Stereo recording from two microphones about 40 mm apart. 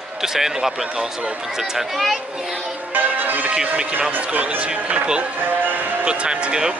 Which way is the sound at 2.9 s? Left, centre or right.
Right.